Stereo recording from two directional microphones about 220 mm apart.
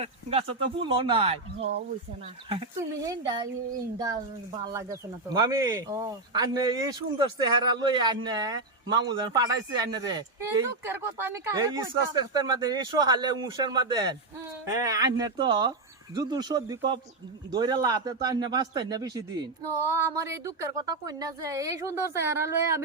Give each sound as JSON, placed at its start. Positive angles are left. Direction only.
{"t": 0.0, "sound": "speech", "side_deg": -25}